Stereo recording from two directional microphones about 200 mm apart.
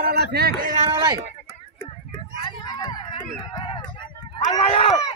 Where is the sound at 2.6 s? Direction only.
20° left (ahead or behind).